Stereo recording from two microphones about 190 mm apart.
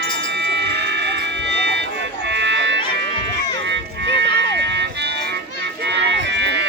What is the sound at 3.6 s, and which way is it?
Music, 70° right (ahead or behind).